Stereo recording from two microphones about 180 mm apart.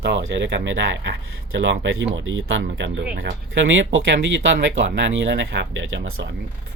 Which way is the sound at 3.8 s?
90° right.